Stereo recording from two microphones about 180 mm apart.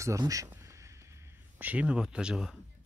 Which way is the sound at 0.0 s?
20° right (ahead or behind).